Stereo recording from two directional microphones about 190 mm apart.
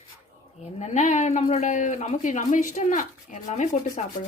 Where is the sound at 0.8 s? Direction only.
40° left (ahead or behind).